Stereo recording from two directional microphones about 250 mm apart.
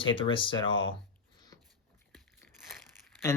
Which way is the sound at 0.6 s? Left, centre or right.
Left.